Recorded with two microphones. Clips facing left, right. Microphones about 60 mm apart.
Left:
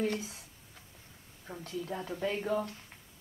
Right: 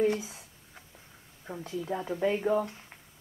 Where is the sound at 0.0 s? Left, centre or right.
Centre.